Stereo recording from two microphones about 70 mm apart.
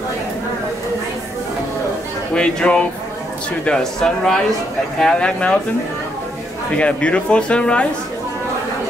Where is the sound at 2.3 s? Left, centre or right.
Centre.